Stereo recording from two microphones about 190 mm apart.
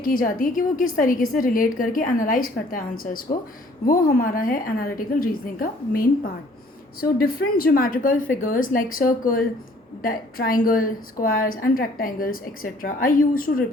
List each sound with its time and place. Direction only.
0.0 s a woman's voice: 50° left (ahead or behind)